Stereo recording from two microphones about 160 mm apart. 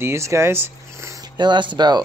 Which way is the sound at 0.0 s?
15° right (ahead or behind).